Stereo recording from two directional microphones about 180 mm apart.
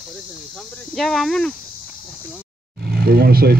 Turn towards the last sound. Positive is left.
turn(degrees=-60)  # may be behind; listen again after turning